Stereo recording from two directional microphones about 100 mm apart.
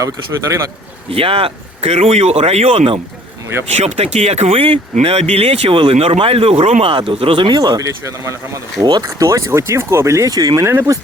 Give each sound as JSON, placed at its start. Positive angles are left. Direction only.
{"t": 1.1, "sound": "speech", "side_deg": -70}
{"t": 7.4, "sound": "speech", "side_deg": -45}
{"t": 8.8, "sound": "speech", "side_deg": -45}
{"t": 9.0, "sound": "speech", "side_deg": -30}
{"t": 10.7, "sound": "speech", "side_deg": -25}